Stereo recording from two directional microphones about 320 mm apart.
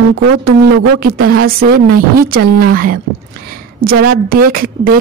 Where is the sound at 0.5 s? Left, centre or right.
Right.